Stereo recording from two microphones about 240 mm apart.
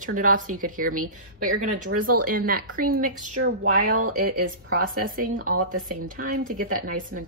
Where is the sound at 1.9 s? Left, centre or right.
Right.